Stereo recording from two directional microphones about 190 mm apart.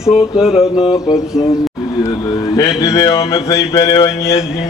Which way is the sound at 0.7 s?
25° left (ahead or behind).